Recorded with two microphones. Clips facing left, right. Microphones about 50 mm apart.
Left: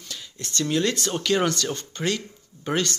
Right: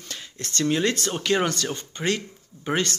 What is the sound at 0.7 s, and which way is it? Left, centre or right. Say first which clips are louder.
Speech: even; right.